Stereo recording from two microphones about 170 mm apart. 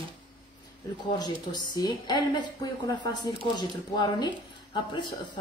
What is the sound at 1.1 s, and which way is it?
A woman's voice, 25° left (ahead or behind).